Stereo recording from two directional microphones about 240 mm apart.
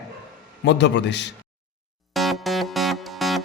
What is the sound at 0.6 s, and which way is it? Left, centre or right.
Speech, left.